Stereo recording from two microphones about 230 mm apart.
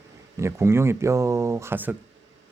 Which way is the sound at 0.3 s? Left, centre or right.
Centre.